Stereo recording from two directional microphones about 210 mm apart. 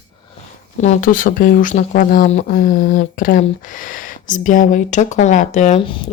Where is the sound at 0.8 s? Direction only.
35° left (ahead or behind).